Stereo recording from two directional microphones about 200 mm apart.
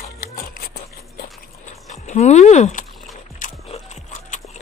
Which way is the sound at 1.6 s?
35° left (ahead or behind).